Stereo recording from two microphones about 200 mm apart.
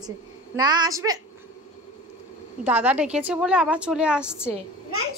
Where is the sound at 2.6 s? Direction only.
5° right (ahead or behind).